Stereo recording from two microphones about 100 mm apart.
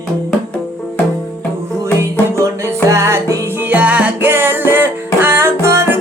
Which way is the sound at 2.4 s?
30° right (ahead or behind).